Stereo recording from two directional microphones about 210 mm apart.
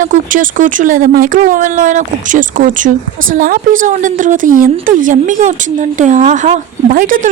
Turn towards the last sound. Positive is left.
turn(degrees=-40)  # may be behind; listen again after turning